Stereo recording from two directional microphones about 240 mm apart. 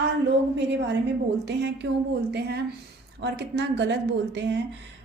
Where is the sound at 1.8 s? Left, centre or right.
Right.